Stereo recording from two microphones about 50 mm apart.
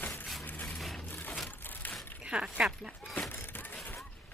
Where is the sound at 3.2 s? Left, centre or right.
Left.